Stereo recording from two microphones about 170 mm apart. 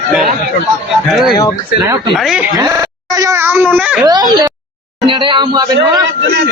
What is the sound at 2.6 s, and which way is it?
A child's voice, 20° right (ahead or behind).